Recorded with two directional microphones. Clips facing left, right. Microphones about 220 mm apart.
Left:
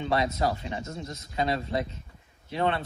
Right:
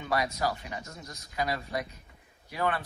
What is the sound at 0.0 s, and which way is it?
A man's voice, 25° left (ahead or behind).